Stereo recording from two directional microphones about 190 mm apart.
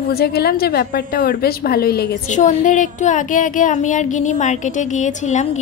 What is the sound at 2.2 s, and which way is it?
Speech, 40° left (ahead or behind).